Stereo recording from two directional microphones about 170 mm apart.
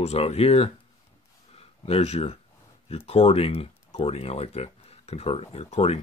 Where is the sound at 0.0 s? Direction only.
35° left (ahead or behind).